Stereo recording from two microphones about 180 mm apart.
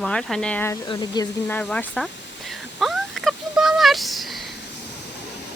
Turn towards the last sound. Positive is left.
turn(degrees=0)  # may be behind; listen again after turning